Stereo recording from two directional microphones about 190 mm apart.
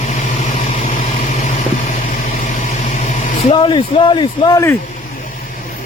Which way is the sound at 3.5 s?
25° left (ahead or behind).